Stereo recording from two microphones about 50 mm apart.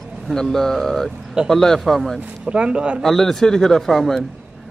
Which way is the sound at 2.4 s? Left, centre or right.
Centre.